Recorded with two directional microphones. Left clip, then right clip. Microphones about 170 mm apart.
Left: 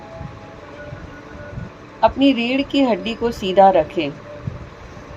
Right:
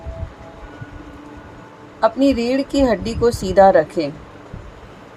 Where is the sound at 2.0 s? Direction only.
45° right (ahead or behind).